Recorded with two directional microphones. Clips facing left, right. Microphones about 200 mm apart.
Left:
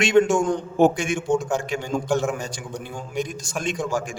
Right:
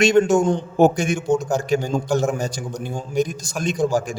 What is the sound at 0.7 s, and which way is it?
A man's voice, 40° right (ahead or behind).